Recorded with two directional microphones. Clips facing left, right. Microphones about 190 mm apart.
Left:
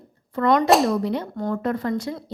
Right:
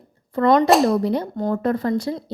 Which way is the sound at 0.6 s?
Centre (ahead or behind).